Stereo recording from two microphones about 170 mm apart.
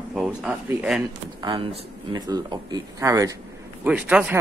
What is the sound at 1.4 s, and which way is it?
Speech, 30° right (ahead or behind).